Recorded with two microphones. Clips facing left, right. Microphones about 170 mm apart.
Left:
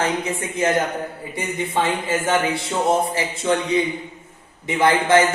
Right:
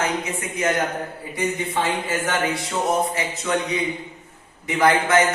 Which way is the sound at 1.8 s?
25° left (ahead or behind).